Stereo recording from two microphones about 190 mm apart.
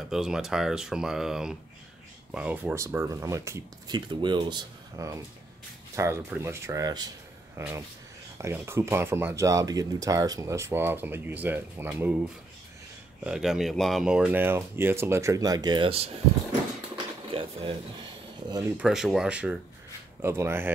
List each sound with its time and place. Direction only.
0.1 s speech: 5° right (ahead or behind); by 16.1 s 30° right (ahead or behind)
17.3 s a sound: 30° right (ahead or behind)
18.8 s speech: centre (ahead or behind)